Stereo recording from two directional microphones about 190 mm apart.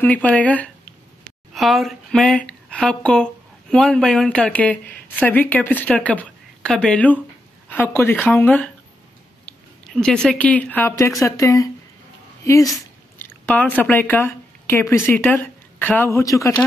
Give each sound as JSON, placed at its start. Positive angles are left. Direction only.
{"t": 0.0, "sound": "speech", "side_deg": 10}